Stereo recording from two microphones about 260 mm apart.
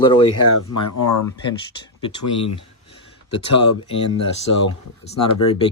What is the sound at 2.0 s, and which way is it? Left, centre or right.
Speech, centre.